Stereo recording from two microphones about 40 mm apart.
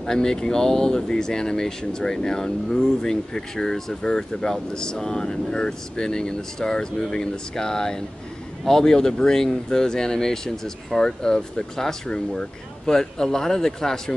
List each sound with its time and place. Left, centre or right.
0.0 s speech: centre